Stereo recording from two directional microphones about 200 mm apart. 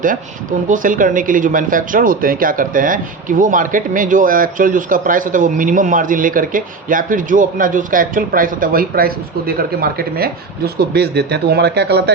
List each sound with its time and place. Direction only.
0.7 s a man's voice: 40° right (ahead or behind)